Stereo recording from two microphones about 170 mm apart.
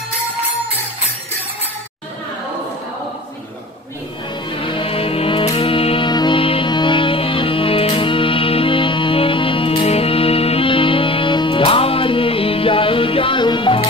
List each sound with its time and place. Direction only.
4.5 s music: 30° left (ahead or behind)